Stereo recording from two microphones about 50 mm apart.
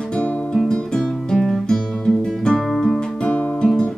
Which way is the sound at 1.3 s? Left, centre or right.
Centre.